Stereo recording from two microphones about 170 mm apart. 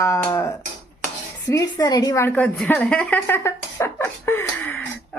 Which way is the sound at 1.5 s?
20° left (ahead or behind).